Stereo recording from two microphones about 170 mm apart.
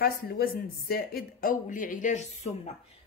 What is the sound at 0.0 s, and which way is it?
A woman's voice, 65° left (ahead or behind).